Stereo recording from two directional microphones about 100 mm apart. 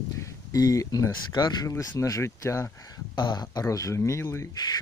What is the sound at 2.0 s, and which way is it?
Speech, 30° left (ahead or behind).